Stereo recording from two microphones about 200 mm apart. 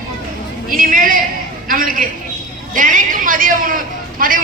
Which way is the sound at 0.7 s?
45° right (ahead or behind).